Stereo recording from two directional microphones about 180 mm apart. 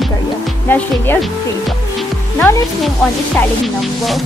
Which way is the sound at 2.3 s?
10° left (ahead or behind).